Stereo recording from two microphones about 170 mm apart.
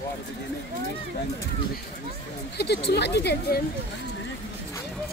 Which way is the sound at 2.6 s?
75° left (ahead or behind).